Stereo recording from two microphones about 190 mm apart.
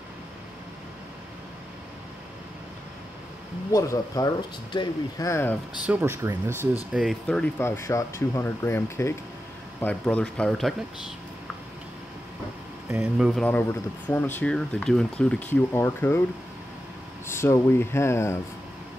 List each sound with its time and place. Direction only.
3.7 s speech: 15° left (ahead or behind)
5.9 s speech: 10° right (ahead or behind)
12.9 s speech: 10° right (ahead or behind)
13.3 s speech: 5° left (ahead or behind)
17.3 s speech: 15° left (ahead or behind)